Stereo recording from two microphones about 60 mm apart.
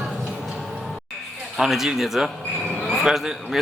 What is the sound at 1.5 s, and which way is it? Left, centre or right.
A man's voice, centre.